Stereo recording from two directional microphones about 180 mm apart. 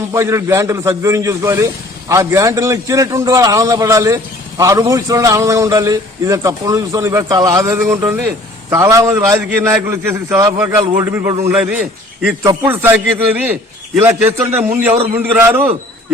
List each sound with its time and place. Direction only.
0.1 s a man's voice: 15° right (ahead or behind)